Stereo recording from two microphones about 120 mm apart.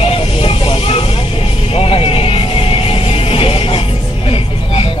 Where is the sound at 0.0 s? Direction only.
55° left (ahead or behind).